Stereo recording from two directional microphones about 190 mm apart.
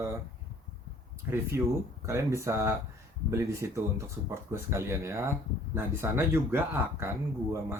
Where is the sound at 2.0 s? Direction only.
15° right (ahead or behind).